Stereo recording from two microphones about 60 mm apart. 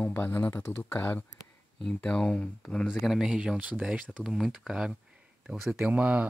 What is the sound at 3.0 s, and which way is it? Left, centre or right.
Speech, centre.